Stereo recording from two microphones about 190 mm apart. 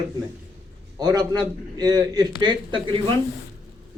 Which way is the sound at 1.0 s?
20° right (ahead or behind).